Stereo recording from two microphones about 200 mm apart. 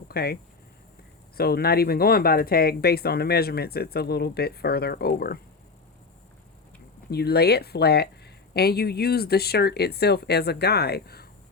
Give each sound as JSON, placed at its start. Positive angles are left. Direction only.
{"t": 0.1, "sound": "speech", "side_deg": 50}
{"t": 1.4, "sound": "speech", "side_deg": 50}
{"t": 7.1, "sound": "speech", "side_deg": 55}